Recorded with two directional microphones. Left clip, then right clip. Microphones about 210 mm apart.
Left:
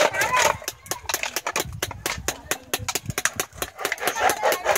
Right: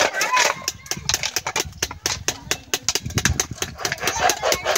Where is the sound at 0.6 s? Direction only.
5° right (ahead or behind).